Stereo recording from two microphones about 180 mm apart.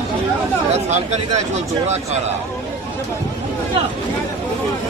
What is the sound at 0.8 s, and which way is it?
A man's voice, 40° right (ahead or behind).